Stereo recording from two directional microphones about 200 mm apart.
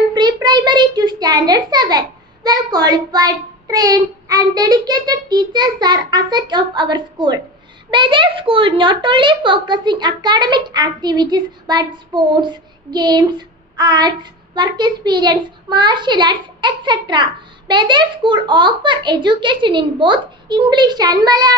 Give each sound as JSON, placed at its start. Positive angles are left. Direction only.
{"t": 0.1, "sound": "a child's voice", "side_deg": -20}